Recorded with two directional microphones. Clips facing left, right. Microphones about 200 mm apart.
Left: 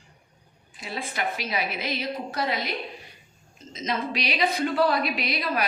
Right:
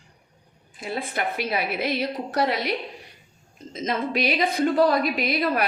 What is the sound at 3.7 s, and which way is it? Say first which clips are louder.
A woman's voice: right 3 dB; 55° right (ahead or behind).